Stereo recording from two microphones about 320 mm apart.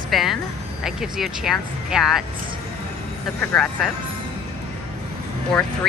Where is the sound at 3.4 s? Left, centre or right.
Centre.